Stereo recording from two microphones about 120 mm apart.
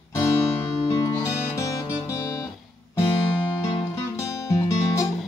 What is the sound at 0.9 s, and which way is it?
Music, 30° left (ahead or behind).